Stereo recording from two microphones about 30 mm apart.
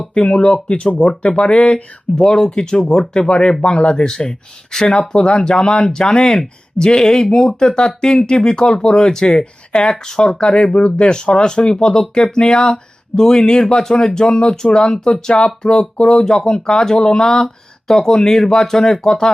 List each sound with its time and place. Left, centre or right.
0.3 s speech: left
2.1 s speech: left
15.3 s speech: left
15.6 s speech: left